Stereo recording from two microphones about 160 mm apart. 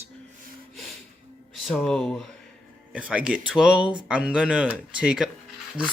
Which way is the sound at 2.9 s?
10° right (ahead or behind).